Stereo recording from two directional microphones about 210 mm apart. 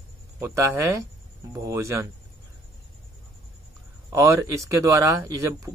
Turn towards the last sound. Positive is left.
turn(degrees=-15)  # may be behind; listen again after turning